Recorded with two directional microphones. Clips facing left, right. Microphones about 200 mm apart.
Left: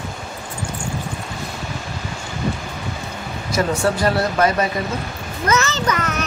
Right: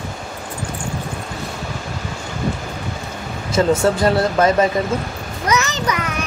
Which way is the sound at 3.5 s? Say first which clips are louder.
Right 4 dB; 25° right (ahead or behind).